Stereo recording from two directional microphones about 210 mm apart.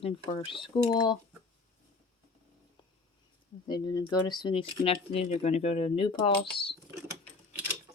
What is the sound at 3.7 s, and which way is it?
Speech, 20° left (ahead or behind).